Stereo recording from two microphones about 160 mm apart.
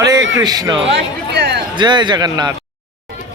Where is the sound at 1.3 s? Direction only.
90° right.